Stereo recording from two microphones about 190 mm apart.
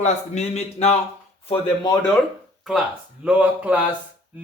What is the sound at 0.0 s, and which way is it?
Speech, 35° left (ahead or behind).